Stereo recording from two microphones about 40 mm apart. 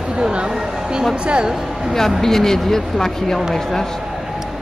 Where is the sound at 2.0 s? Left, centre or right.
Centre.